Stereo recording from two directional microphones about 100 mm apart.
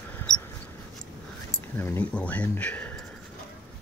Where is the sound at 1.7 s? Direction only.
25° left (ahead or behind).